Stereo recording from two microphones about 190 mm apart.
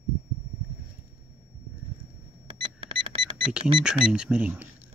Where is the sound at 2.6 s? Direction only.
25° right (ahead or behind).